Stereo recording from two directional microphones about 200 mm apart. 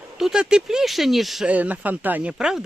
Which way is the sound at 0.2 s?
5° right (ahead or behind).